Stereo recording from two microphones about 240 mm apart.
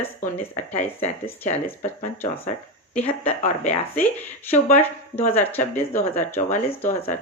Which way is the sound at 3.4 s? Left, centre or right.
Left.